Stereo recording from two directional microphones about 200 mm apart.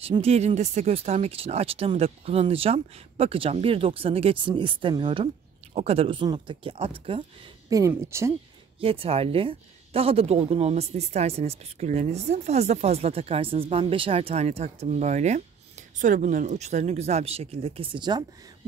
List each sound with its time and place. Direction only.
0.0 s speech: 30° right (ahead or behind)
7.7 s speech: 15° right (ahead or behind)
8.8 s speech: 30° right (ahead or behind)